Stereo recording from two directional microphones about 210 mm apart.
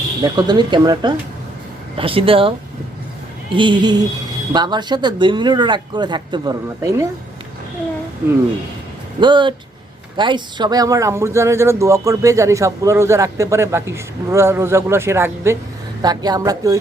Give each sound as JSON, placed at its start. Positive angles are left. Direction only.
{"t": 0.2, "sound": "speech", "side_deg": -20}
{"t": 9.2, "sound": "speech", "side_deg": -20}